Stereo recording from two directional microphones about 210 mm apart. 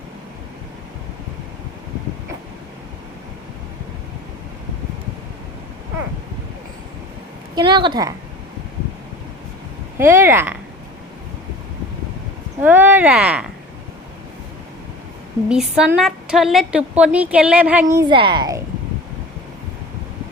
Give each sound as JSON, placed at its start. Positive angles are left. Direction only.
{"t": 7.5, "sound": "a woman's voice", "side_deg": -20}
{"t": 10.0, "sound": "speech", "side_deg": -10}
{"t": 12.6, "sound": "speech", "side_deg": -10}
{"t": 15.4, "sound": "a woman's voice", "side_deg": -5}